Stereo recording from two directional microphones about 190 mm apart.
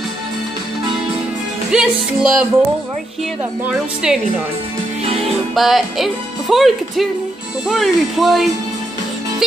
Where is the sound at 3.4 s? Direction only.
5° right (ahead or behind).